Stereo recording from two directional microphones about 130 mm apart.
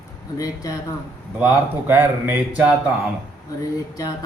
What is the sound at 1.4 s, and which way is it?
A man's voice, 15° right (ahead or behind).